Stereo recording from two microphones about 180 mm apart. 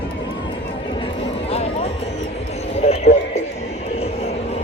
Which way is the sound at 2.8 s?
35° left (ahead or behind).